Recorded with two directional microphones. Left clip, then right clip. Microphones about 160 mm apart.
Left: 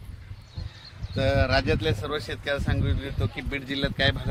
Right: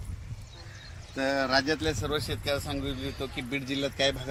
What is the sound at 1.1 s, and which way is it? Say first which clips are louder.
Speech: left 3 dB; 55° left (ahead or behind).